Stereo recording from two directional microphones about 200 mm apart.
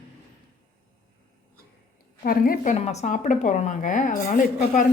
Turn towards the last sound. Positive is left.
turn(degrees=40)  # may be behind; listen again after turning